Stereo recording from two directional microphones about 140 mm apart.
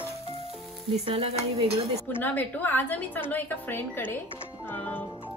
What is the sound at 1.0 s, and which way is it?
Dishes, 45° right (ahead or behind).